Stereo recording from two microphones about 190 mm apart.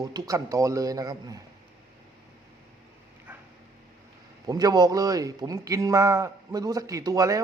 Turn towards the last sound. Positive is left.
turn(degrees=-20)  # may be behind; listen again after turning